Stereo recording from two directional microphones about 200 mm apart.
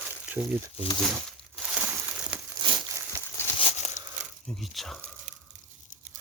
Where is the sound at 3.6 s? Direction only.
35° left (ahead or behind).